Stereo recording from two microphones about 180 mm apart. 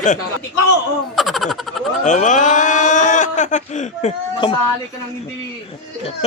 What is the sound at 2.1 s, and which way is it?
Speech, 45° left (ahead or behind).